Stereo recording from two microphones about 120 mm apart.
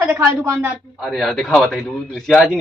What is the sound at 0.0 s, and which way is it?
Speech, 15° right (ahead or behind).